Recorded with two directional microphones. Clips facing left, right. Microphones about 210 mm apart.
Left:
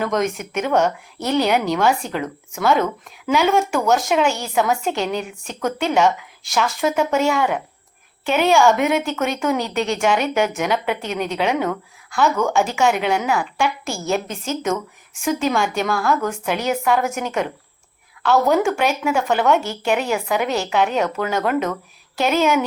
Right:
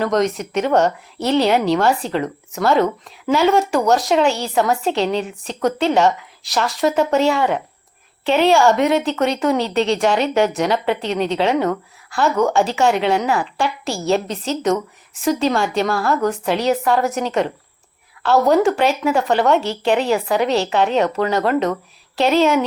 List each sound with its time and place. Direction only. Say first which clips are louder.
0.0 s speech: right 3 dB; centre (ahead or behind)
15.2 s speech: right 2 dB; centre (ahead or behind)